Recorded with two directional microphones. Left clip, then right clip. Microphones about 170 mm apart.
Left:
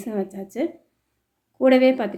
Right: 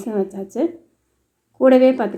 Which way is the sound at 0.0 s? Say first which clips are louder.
Right 5 dB; 5° left (ahead or behind).